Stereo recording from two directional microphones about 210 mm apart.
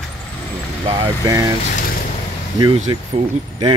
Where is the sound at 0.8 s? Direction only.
25° right (ahead or behind).